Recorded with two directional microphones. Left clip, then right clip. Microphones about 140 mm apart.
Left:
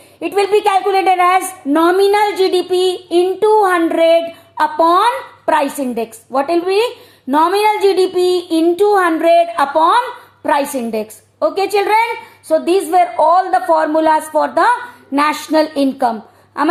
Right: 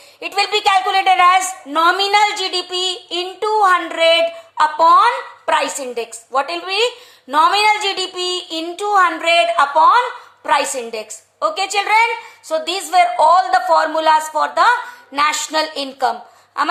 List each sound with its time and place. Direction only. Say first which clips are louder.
0.2 s a woman's voice: left 4 dB; 55° left (ahead or behind)
2.0 s a woman's voice: left 3 dB; 80° left
3.1 s child singing: left 11 dB; 50° left (ahead or behind)
3.9 s a woman's voice: left 2 dB; 85° left
7.3 s a woman's voice: even; 60° left (ahead or behind); by 10.0 s 90° left
10.4 s a woman's voice: left 1 dB; 75° left (ahead or behind)
12.5 s a woman's voice: left 6 dB; 65° left (ahead or behind)